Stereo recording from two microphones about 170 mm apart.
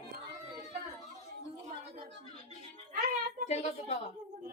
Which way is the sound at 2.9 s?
55° right (ahead or behind).